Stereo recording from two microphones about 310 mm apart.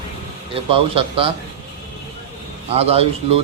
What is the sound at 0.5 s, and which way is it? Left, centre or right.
Speech, centre.